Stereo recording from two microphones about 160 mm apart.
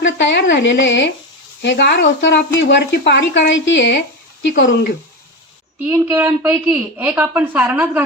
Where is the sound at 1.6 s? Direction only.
90° left.